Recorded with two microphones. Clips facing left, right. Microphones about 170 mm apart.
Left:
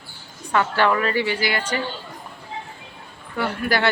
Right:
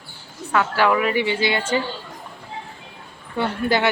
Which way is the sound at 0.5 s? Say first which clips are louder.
Right 1 dB; 5° right (ahead or behind).